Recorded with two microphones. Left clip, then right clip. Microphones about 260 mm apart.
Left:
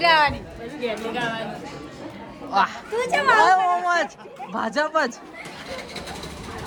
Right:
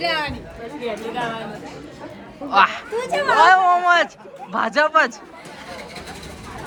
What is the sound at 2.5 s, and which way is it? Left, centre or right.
Speech, centre.